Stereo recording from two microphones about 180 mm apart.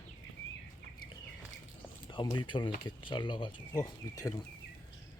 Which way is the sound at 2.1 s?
25° left (ahead or behind).